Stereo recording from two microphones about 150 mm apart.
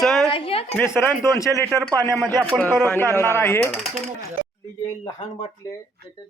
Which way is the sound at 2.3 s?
20° right (ahead or behind).